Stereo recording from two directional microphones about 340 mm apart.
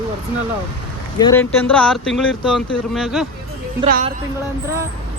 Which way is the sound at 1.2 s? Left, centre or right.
Centre.